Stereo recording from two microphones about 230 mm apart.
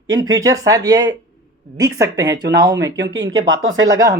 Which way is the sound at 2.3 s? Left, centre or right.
Centre.